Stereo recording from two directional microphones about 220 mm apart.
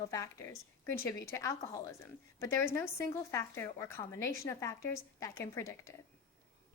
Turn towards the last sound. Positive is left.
turn(degrees=15)  # may be behind; listen again after turning